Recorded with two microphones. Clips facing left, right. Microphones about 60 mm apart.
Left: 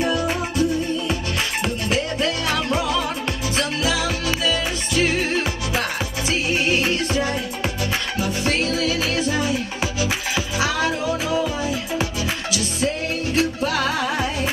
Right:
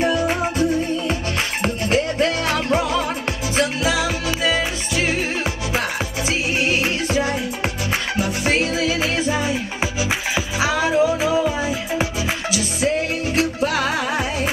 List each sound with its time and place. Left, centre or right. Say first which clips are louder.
0.0 s music: right 3 dB; right
3.8 s music: right 2 dB; centre